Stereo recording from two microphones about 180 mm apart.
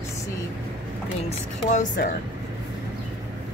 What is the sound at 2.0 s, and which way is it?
Speech, 65° left (ahead or behind).